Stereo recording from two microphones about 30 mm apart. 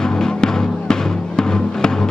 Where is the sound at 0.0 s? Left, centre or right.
Left.